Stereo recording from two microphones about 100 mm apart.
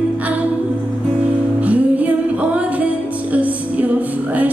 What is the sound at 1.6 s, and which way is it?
Music, 15° right (ahead or behind).